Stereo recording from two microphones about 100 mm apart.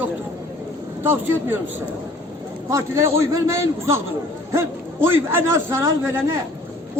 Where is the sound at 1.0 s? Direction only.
20° right (ahead or behind).